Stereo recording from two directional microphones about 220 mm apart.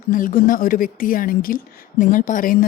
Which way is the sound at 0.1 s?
40° left (ahead or behind).